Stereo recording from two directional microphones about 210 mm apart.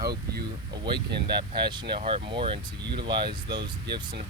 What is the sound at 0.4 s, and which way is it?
Speech, 20° right (ahead or behind).